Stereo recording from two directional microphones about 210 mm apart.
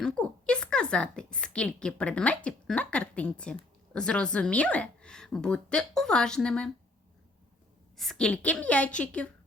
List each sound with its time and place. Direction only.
0.0 s a woman's voice: 5° left (ahead or behind)
7.9 s a woman's voice: centre (ahead or behind)